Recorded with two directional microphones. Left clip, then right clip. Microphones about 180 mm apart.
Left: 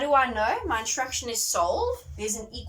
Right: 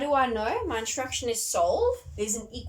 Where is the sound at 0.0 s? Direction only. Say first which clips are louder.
Left 3 dB; 30° right (ahead or behind).